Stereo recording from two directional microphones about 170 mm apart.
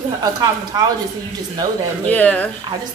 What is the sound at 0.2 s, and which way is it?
Speech, 20° right (ahead or behind).